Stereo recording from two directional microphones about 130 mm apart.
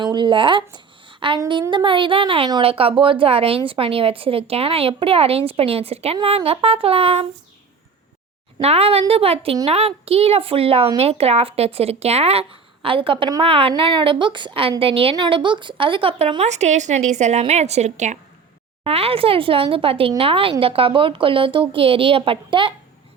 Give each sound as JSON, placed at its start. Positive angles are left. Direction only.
{"t": 0.0, "sound": "a woman's voice", "side_deg": -35}
{"t": 8.5, "sound": "a woman's voice", "side_deg": -50}
{"t": 16.4, "sound": "a woman's voice", "side_deg": -60}
{"t": 18.9, "sound": "speech", "side_deg": -45}